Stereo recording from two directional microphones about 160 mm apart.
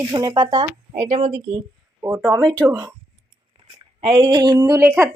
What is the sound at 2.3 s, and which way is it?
Speech, 25° right (ahead or behind).